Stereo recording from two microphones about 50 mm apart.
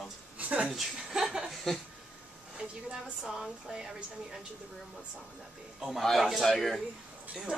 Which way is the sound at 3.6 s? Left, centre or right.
Centre.